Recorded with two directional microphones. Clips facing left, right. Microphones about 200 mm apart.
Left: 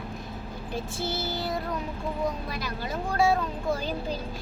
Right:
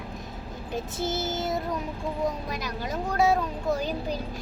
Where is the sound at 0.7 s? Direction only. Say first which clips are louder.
Right 2 dB; 20° right (ahead or behind).